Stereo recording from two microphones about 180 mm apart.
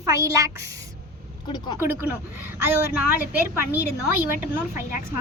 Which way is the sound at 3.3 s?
10° right (ahead or behind).